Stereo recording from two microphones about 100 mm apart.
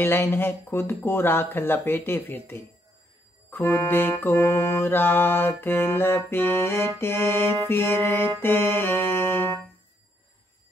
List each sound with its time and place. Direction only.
0.0 s music: 20° left (ahead or behind)